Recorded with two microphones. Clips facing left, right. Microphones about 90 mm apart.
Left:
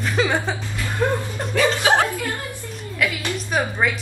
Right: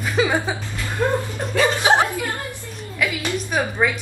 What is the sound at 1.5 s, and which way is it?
Music, 20° right (ahead or behind).